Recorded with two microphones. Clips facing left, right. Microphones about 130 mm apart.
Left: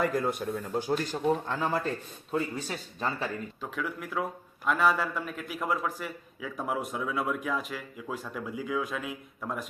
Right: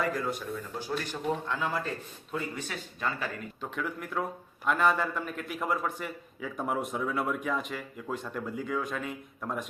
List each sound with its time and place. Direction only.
0.0 s a man's voice: 50° left (ahead or behind); by 3.2 s 35° left (ahead or behind)
3.6 s a man's voice: centre (ahead or behind)